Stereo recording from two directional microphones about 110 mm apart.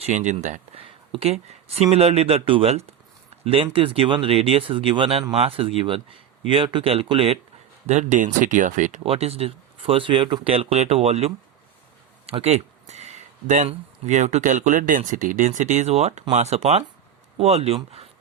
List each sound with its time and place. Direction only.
0.0 s speech: 90° right; by 7.3 s 60° right (ahead or behind)
7.9 s speech: 90° right
8.8 s speech: 80° right
12.2 s a sound: 70° right (ahead or behind); by 14.4 s 85° right
14.7 s speech: 90° right; by 17.7 s 70° right (ahead or behind)